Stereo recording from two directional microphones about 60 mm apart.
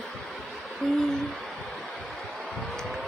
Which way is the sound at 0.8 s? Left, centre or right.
Centre.